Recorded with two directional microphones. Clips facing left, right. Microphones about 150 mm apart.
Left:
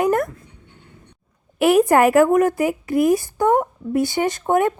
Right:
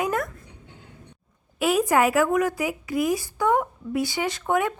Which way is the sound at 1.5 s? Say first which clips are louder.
Left 6 dB; 65° left (ahead or behind).